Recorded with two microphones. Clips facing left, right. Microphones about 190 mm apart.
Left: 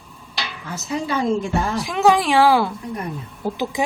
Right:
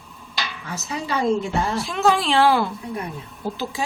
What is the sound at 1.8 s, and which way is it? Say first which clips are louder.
A woman's voice: left 5 dB; 15° left (ahead or behind).